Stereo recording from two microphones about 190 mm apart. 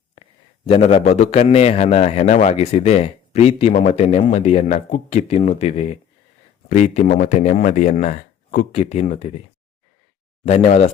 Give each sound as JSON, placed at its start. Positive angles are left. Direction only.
{"t": 0.2, "sound": "a man's voice", "side_deg": 30}
{"t": 8.7, "sound": "a man's voice", "side_deg": 35}
{"t": 10.4, "sound": "a man's voice", "side_deg": 35}